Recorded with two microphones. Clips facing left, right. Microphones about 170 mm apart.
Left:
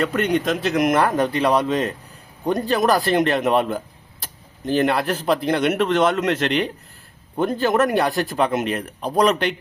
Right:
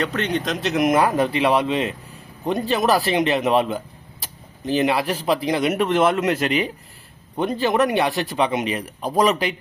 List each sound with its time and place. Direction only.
0.0 s speech: 10° left (ahead or behind)